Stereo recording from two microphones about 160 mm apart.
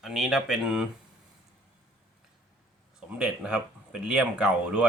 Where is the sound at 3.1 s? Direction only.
5° right (ahead or behind).